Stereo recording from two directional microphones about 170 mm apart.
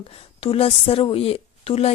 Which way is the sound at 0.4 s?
35° left (ahead or behind).